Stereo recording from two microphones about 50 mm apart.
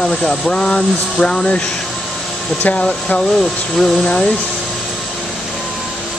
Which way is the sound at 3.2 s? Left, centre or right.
Centre.